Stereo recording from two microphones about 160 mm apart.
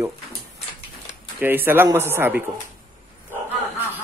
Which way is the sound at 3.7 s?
10° right (ahead or behind).